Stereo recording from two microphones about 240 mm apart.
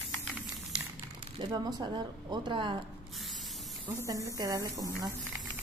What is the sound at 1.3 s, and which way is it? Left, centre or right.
Speech, centre.